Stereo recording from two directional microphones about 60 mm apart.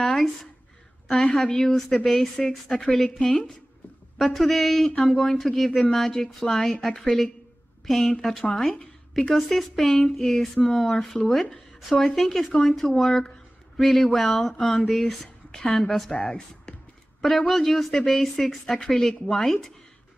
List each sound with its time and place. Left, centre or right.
0.0 s a sound: centre
1.0 s a woman's voice: centre
17.2 s speech: centre